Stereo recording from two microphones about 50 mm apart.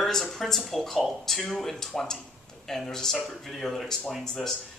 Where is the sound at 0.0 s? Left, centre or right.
Centre.